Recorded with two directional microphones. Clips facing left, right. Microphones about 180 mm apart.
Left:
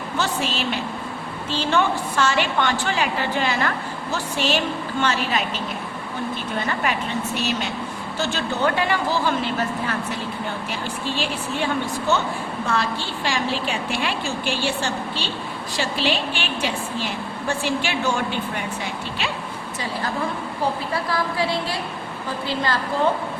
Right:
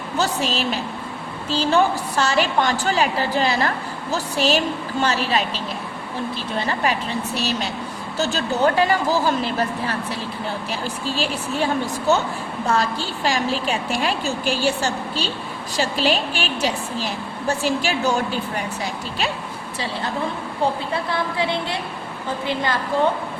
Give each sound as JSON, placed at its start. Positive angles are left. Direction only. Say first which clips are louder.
{"t": 0.2, "sound": "a woman's voice", "louder": "right 3 dB", "side_deg": -40}
{"t": 20.6, "sound": "a woman's voice", "louder": "right 2 dB", "side_deg": -25}